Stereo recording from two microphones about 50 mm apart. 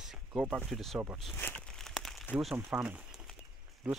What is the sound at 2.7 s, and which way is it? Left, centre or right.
Speech, right.